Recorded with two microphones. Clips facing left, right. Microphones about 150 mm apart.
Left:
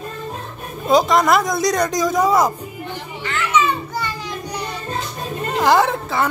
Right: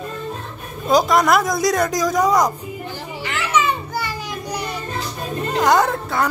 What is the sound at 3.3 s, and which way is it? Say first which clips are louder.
Children playing: left 1 dB; 10° right (ahead or behind).